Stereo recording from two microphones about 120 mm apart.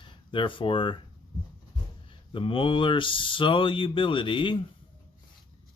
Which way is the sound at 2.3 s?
45° left (ahead or behind).